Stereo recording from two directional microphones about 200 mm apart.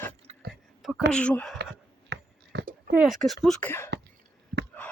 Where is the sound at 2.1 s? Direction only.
60° right (ahead or behind).